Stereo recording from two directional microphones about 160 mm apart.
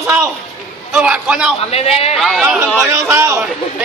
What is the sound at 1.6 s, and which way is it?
Speech, 40° left (ahead or behind).